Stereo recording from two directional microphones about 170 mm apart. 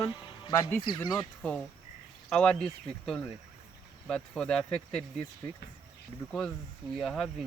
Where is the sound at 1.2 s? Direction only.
5° left (ahead or behind).